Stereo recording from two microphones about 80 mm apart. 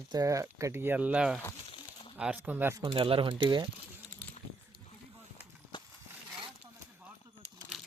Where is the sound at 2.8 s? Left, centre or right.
Right.